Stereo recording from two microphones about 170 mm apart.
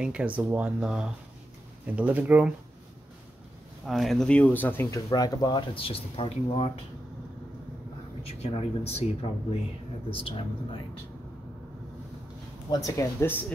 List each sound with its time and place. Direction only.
0.0 s speech: 5° right (ahead or behind)
3.8 s speech: centre (ahead or behind)
4.9 s speech: 20° left (ahead or behind)
8.2 s speech: 40° left (ahead or behind)
12.7 s speech: 20° left (ahead or behind)